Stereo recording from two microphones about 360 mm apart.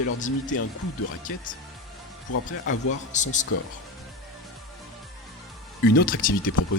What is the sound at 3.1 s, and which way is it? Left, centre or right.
Speech, centre.